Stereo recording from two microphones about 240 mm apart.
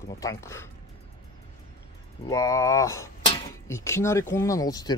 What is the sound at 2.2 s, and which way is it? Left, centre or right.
Speech, centre.